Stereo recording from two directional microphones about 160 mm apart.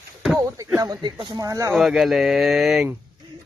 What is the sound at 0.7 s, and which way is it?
Speech, 25° right (ahead or behind).